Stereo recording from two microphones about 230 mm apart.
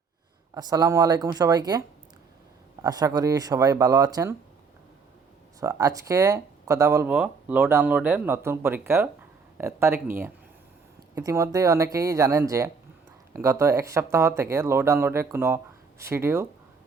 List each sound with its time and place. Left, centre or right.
0.5 s speech: centre
2.8 s speech: centre
5.5 s speech: centre